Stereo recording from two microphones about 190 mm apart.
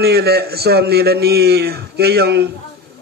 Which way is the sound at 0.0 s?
55° right (ahead or behind).